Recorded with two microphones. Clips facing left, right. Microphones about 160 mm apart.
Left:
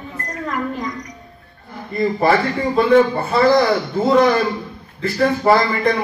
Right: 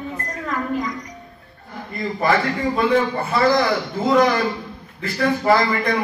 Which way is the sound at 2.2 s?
30° left (ahead or behind).